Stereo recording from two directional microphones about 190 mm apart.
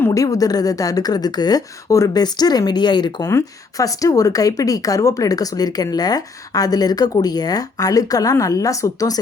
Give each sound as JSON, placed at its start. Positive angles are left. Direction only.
{"t": 0.0, "sound": "speech", "side_deg": 15}